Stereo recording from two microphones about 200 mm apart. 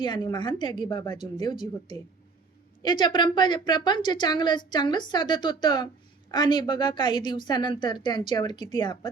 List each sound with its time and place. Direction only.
0.0 s a woman's voice: 20° left (ahead or behind)